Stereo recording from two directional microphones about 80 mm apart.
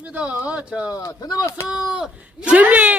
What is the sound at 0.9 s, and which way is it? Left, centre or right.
Speech, left.